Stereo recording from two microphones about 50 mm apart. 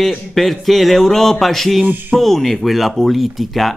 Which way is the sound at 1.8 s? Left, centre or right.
Right.